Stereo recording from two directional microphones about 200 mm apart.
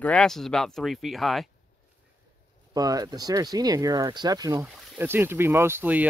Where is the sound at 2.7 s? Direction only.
20° right (ahead or behind).